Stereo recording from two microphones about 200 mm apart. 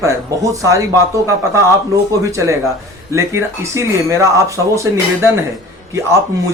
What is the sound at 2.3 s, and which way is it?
Speech, 15° right (ahead or behind).